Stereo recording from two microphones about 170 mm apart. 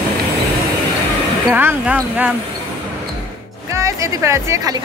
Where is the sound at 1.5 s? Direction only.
10° right (ahead or behind).